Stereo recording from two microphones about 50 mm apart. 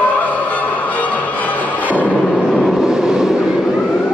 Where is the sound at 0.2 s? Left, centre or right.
Left.